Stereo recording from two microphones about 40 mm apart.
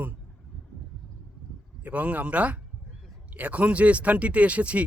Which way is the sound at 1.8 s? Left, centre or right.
Right.